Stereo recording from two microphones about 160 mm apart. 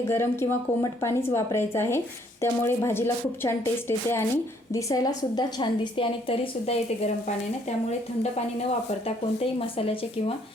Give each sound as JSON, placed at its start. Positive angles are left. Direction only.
{"t": 0.1, "sound": "a woman's voice", "side_deg": 15}
{"t": 9.6, "sound": "a woman's voice", "side_deg": 35}